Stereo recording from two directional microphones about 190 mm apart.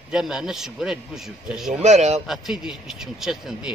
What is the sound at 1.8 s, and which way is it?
Speech, 35° right (ahead or behind).